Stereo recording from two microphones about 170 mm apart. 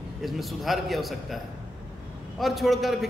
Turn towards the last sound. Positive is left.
turn(degrees=0)  # may be behind; listen again after turning